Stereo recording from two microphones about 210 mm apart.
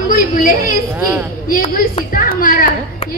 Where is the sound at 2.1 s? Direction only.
40° left (ahead or behind).